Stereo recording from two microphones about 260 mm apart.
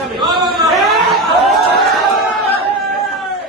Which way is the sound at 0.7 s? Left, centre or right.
Centre.